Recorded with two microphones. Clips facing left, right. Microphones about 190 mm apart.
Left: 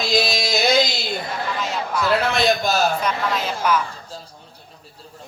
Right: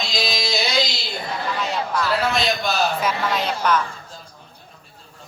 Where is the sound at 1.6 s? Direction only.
Centre (ahead or behind).